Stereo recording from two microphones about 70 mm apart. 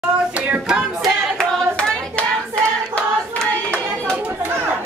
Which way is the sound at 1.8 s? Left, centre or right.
Centre.